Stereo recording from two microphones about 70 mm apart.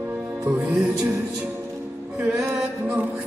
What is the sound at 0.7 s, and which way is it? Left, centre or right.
Music, centre.